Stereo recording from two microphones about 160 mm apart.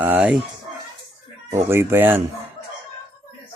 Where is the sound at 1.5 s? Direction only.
15° right (ahead or behind).